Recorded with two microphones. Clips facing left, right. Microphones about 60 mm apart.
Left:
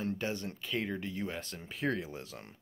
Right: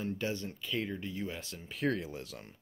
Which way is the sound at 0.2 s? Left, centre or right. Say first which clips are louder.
Even; left.